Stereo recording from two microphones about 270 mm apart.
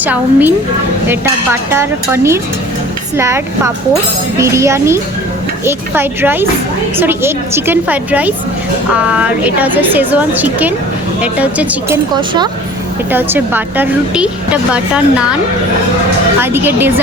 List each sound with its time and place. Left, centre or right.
0.0 s a woman's voice: centre
1.7 s a woman's voice: centre
12.1 s a woman's voice: centre
16.4 s a woman's voice: centre